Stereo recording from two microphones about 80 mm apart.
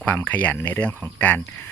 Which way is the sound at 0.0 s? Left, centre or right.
Left.